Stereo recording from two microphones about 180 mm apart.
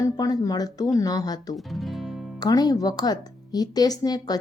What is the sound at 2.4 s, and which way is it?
A woman's voice, 20° left (ahead or behind).